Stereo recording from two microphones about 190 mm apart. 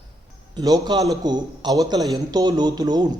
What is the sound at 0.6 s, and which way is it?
A man's voice, 20° right (ahead or behind).